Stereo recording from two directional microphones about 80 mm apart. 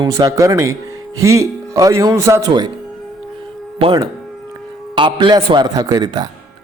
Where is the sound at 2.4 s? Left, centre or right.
Right.